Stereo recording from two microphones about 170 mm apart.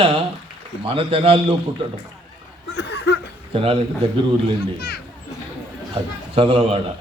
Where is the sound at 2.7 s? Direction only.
75° left (ahead or behind).